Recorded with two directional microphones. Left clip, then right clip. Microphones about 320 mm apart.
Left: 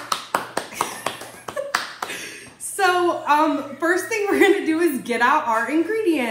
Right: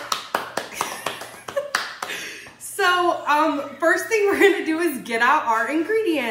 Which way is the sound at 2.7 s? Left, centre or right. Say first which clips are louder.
Even; centre.